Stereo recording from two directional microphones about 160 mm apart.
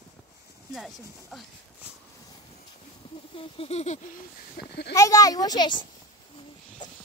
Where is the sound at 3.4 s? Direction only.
35° left (ahead or behind).